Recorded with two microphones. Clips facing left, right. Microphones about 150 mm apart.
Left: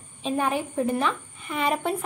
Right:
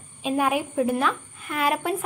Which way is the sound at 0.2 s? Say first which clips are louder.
Right 2 dB; 10° right (ahead or behind).